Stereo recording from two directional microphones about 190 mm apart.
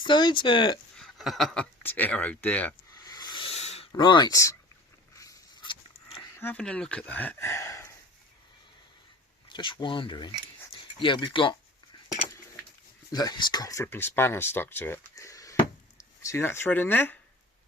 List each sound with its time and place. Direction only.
0.0 s speech: 25° left (ahead or behind)
0.9 s speech: centre (ahead or behind)
3.0 s rub: 20° left (ahead or behind)
3.9 s speech: 25° left (ahead or behind)
5.1 s a sound: 15° left (ahead or behind)
6.3 s speech: 10° left (ahead or behind)
9.5 s speech: 25° left (ahead or behind)
13.1 s speech: 20° left (ahead or behind)